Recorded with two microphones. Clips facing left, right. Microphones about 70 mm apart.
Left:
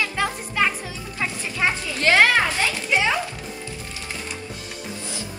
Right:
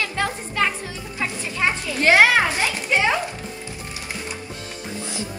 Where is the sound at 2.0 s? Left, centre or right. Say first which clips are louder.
Right 2 dB; centre.